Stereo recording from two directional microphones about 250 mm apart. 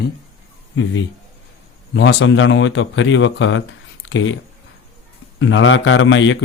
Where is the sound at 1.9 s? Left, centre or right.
Left.